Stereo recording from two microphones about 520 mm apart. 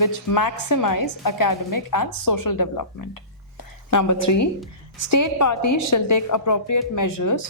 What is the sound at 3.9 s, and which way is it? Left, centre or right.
A woman's voice, left.